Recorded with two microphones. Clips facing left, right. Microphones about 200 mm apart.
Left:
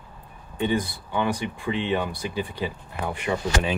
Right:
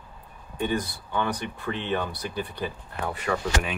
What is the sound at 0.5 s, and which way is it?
Speech, 15° left (ahead or behind).